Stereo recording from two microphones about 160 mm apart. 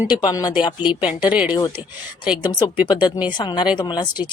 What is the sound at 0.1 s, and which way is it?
Speech, 25° left (ahead or behind).